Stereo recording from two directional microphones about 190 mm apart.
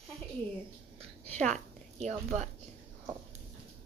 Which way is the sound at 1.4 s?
40° right (ahead or behind).